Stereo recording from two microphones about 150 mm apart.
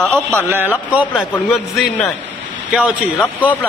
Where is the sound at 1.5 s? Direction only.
Centre (ahead or behind).